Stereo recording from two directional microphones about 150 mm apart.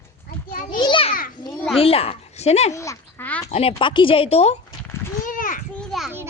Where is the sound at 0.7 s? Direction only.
30° left (ahead or behind).